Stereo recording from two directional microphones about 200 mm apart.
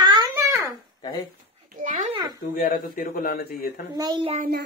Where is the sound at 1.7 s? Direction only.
40° right (ahead or behind).